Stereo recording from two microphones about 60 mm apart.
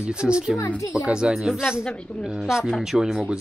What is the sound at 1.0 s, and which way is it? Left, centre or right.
Speech, centre.